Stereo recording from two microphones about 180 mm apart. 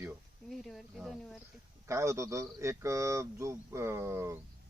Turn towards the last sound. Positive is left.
turn(degrees=-15)  # may be behind; listen again after turning